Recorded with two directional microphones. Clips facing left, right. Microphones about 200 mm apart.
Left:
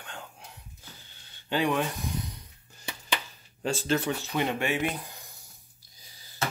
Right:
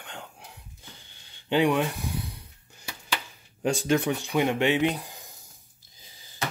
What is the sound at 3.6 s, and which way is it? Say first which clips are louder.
Speech: right 4 dB; 15° right (ahead or behind).